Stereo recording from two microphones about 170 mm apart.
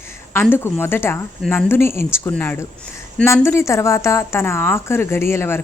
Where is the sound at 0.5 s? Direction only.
15° left (ahead or behind).